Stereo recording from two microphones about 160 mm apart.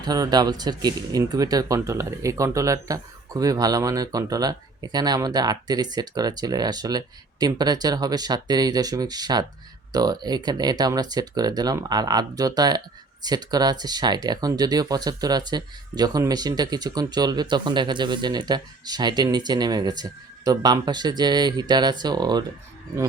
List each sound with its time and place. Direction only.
0.0 s speech: 25° right (ahead or behind)